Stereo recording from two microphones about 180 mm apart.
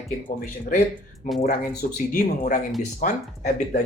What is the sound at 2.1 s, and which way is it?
Speech, 45° left (ahead or behind).